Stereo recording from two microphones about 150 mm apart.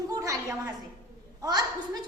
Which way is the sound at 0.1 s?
20° right (ahead or behind).